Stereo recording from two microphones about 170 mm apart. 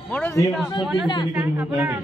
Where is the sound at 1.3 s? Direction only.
10° right (ahead or behind).